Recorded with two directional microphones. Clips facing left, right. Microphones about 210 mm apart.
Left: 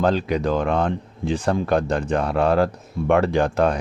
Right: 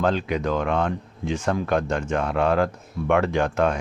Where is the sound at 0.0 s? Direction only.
35° left (ahead or behind).